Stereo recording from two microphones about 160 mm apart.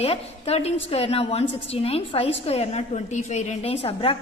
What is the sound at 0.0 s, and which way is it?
A woman's voice, 40° left (ahead or behind).